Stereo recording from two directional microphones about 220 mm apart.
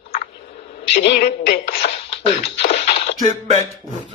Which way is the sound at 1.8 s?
25° left (ahead or behind).